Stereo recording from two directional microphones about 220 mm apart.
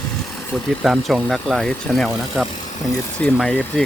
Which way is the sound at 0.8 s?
Centre (ahead or behind).